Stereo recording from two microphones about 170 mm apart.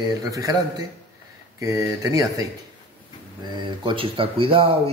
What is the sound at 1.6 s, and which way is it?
Speech, 20° right (ahead or behind).